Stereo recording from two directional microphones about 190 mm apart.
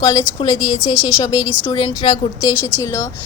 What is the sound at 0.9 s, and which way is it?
Speech, 5° right (ahead or behind).